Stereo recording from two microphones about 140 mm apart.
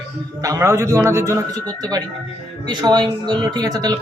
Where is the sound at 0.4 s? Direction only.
20° right (ahead or behind).